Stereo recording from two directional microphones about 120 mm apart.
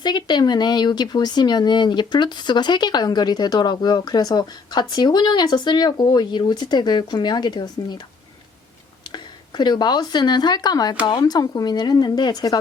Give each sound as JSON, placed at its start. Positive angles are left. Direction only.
{"t": 0.0, "sound": "speech", "side_deg": 40}
{"t": 9.1, "sound": "speech", "side_deg": 40}